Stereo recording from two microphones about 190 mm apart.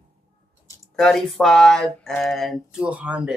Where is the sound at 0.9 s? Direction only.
Centre (ahead or behind).